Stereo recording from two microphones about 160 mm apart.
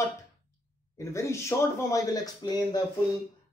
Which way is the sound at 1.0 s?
20° left (ahead or behind).